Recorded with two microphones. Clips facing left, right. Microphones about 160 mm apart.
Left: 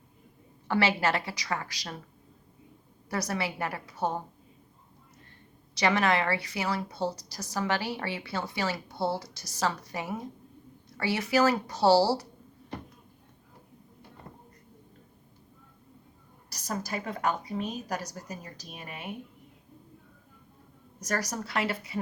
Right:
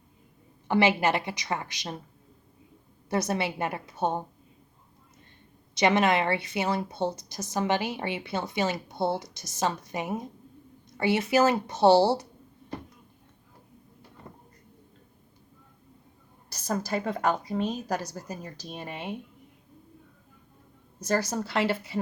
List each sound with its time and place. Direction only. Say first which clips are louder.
0.7 s a woman's voice: right 3 dB; 20° right (ahead or behind)
3.1 s a woman's voice: right 4 dB; 25° right (ahead or behind)
5.7 s a woman's voice: right 3 dB; 20° right (ahead or behind)
16.9 s a woman's voice: right 3 dB; 35° right (ahead or behind)
21.0 s a woman's voice: right 5 dB; 30° right (ahead or behind)